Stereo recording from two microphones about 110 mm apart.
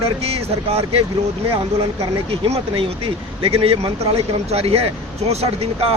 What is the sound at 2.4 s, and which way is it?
Speech, 60° right (ahead or behind).